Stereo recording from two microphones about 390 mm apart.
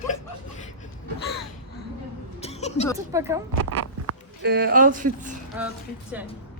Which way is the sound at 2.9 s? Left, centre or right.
Centre.